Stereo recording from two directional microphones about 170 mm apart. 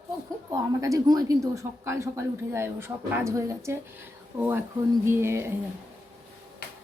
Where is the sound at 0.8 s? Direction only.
20° right (ahead or behind).